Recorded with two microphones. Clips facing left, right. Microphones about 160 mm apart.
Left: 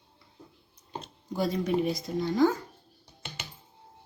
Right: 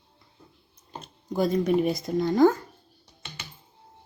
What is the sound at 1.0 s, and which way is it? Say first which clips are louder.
Speech: right 5 dB; 50° right (ahead or behind).